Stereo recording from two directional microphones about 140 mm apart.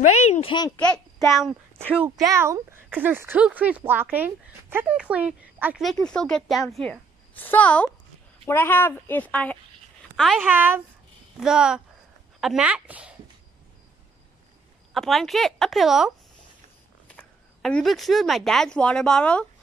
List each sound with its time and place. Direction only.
0.0 s speech: 50° left (ahead or behind)
0.7 s a woman's voice: 5° left (ahead or behind)
2.0 s speech: 20° right (ahead or behind)
5.8 s a child's voice: centre (ahead or behind)
10.4 s a child's voice: 15° right (ahead or behind)
15.0 s a child's voice: centre (ahead or behind)
17.1 s speech: 5° left (ahead or behind)